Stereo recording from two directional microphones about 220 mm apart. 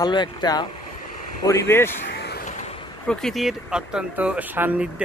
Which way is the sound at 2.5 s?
30° left (ahead or behind).